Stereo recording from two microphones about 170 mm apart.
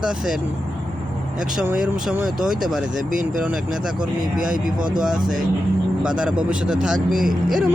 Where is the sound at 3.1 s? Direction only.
50° right (ahead or behind).